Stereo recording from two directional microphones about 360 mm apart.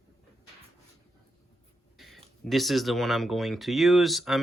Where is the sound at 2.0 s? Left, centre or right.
Centre.